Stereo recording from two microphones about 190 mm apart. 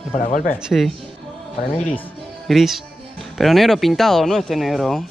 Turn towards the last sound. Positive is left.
turn(degrees=0)  # may be behind; listen again after turning